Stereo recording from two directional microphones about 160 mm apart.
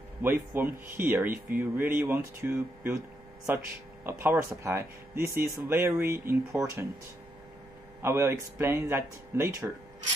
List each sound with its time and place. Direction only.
0.2 s speech: 15° right (ahead or behind)
8.0 s speech: 15° right (ahead or behind)